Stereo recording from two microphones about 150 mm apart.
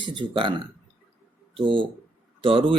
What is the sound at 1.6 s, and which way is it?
Speech, 35° right (ahead or behind).